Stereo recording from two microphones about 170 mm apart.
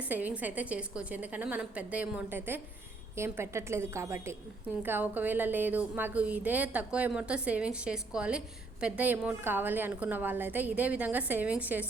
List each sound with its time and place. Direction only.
0.0 s a woman's voice: 10° right (ahead or behind)